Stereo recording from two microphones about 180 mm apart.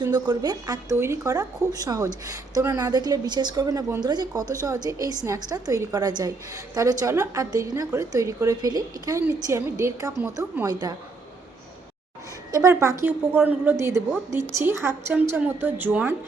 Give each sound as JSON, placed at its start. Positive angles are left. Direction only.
{"t": 0.0, "sound": "speech", "side_deg": -20}
{"t": 12.5, "sound": "a woman's voice", "side_deg": -15}